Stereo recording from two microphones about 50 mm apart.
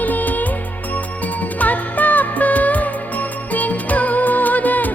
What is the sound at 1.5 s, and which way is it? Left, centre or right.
Music, left.